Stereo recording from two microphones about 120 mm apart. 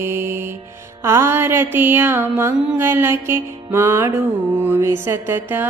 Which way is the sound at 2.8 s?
20° right (ahead or behind).